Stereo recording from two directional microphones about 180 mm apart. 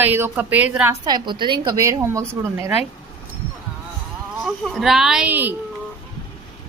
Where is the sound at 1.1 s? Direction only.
25° right (ahead or behind).